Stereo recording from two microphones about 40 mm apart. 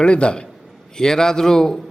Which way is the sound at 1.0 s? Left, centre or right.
Centre.